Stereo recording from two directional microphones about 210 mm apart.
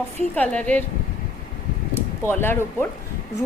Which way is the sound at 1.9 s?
10° left (ahead or behind).